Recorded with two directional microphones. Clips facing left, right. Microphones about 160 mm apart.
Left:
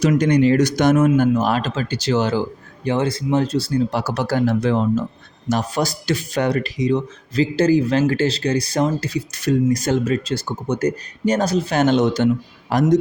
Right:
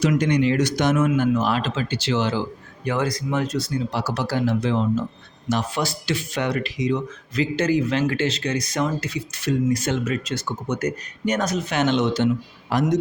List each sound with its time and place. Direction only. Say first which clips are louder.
0.0 s speech: left 4 dB; 40° left (ahead or behind)
2.8 s speech: left 4 dB; 25° left (ahead or behind)
3.9 s speech: left 4 dB; 50° left (ahead or behind)